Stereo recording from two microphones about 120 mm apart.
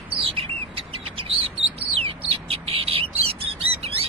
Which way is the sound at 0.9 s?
50° right (ahead or behind).